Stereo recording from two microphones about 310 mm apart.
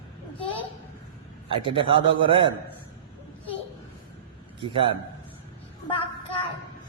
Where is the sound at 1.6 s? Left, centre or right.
Centre.